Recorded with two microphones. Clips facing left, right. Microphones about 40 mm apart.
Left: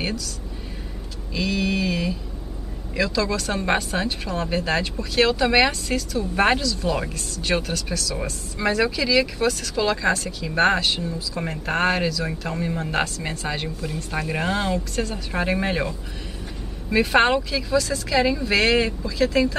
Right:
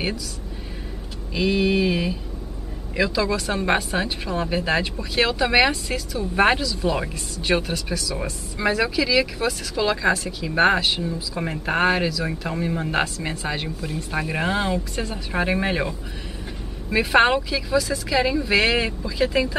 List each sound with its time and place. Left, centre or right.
1.3 s speech: centre
16.9 s speech: centre